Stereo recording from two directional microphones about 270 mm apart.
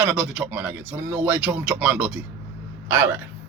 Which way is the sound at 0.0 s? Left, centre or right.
Centre.